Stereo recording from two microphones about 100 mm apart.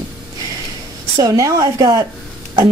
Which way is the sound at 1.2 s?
35° right (ahead or behind).